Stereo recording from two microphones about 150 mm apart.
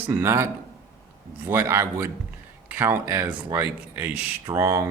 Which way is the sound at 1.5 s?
15° right (ahead or behind).